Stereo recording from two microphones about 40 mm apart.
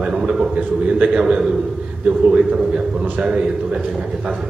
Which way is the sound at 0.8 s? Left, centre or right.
Right.